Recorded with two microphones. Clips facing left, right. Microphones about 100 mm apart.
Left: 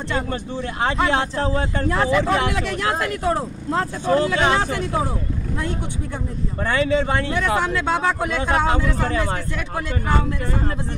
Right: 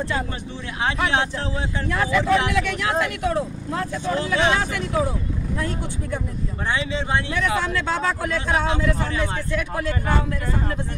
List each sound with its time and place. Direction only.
1.1 s speech: 50° left (ahead or behind)
1.9 s speech: 35° left (ahead or behind)
4.0 s speech: 50° left (ahead or behind)
4.4 s speech: 35° left (ahead or behind)
6.7 s speech: 50° left (ahead or behind)
7.3 s speech: 25° left (ahead or behind)
8.6 s speech: 45° left (ahead or behind)